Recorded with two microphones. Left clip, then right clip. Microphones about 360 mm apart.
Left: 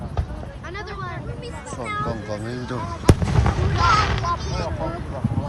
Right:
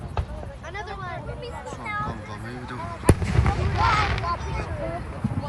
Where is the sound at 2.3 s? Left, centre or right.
Centre.